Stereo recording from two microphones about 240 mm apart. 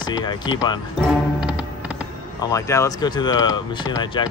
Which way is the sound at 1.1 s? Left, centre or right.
Centre.